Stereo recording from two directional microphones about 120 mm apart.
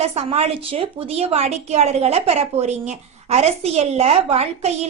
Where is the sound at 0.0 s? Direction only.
60° right (ahead or behind).